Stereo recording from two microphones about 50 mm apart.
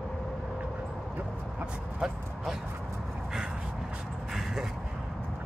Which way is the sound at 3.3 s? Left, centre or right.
Centre.